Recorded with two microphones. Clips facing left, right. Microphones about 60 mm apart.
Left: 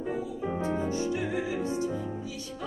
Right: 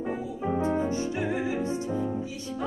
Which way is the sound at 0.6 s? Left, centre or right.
Right.